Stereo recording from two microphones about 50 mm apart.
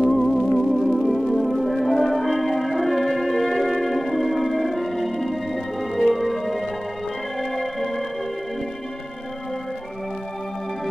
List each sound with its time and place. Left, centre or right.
0.0 s music: centre